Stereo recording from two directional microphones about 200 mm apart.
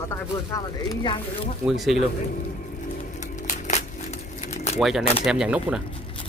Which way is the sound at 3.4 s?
40° left (ahead or behind).